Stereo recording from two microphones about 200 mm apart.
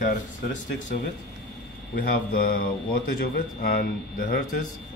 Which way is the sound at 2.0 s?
50° left (ahead or behind).